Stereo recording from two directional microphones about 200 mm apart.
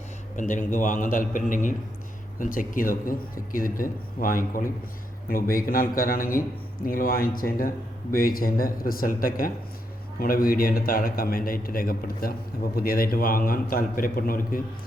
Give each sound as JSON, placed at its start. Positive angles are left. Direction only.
{"t": 0.3, "sound": "a man's voice", "side_deg": 40}